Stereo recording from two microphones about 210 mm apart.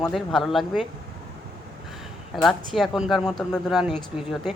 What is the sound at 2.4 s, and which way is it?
Speech, centre (ahead or behind).